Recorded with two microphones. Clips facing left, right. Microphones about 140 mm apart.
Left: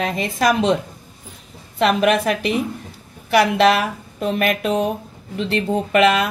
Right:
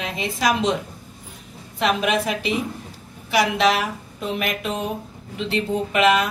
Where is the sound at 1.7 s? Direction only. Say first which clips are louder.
Left 5 dB; 60° left (ahead or behind).